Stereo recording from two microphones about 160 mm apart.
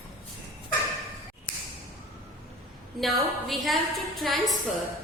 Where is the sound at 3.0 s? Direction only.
Centre (ahead or behind).